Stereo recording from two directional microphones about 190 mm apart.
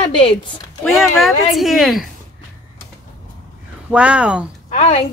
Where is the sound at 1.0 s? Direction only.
Centre (ahead or behind).